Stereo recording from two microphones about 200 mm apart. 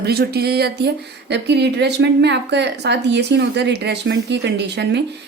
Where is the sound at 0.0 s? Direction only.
55° right (ahead or behind).